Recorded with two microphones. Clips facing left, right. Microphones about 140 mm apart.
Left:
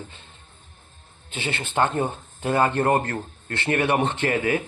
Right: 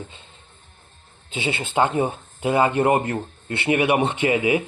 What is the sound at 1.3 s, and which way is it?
Speech, 15° right (ahead or behind).